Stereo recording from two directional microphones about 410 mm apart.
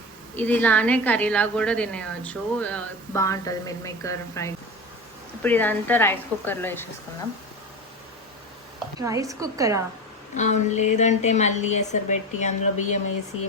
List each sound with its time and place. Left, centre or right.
0.3 s a woman's voice: centre
9.0 s a woman's voice: centre
10.3 s a woman's voice: centre